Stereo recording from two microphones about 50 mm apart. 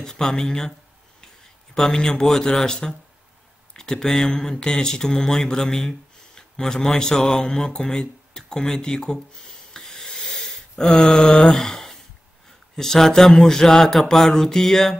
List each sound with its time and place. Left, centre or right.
0.0 s speech: centre
1.8 s speech: centre
9.8 s wheeze: centre
11.5 s speech: centre